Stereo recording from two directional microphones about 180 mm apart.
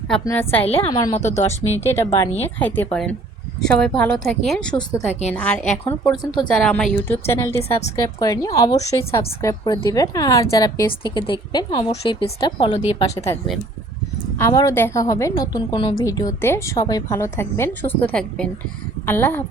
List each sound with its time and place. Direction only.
0.3 s a woman's voice: 10° left (ahead or behind)
0.6 s speech: 35° left (ahead or behind)
2.6 s a woman's voice: 10° left (ahead or behind)
4.9 s a woman's voice: 15° left (ahead or behind)